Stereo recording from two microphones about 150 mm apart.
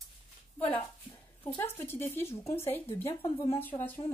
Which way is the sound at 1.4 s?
15° left (ahead or behind).